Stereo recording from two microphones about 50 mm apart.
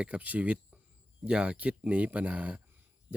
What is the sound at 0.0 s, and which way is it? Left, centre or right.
Speech, right.